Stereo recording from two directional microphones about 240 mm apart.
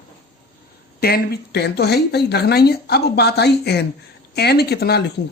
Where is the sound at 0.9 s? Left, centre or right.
Left.